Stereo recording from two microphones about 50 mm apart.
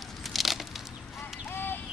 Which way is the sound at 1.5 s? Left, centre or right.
Left.